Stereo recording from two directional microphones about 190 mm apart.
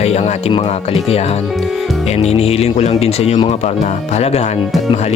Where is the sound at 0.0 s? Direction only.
35° left (ahead or behind).